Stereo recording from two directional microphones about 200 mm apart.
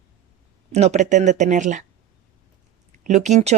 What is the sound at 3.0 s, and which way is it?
Speech, 35° right (ahead or behind).